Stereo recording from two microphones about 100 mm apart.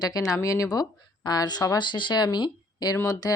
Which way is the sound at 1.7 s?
50° left (ahead or behind).